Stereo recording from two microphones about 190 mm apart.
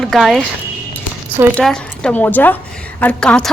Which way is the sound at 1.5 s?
5° left (ahead or behind).